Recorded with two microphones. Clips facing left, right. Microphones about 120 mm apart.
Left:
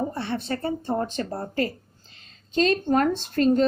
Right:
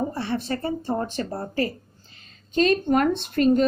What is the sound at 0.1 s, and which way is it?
Speech, 25° left (ahead or behind).